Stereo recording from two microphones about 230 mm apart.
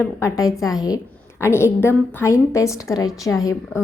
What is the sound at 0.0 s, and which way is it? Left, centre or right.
Speech, centre.